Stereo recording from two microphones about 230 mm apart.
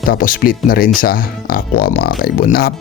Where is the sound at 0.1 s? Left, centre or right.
Left.